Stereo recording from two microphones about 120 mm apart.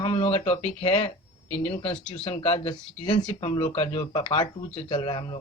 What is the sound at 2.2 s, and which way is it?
Speech, 55° left (ahead or behind).